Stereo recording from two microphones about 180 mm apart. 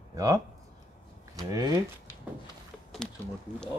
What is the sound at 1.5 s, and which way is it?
Speech, 20° right (ahead or behind).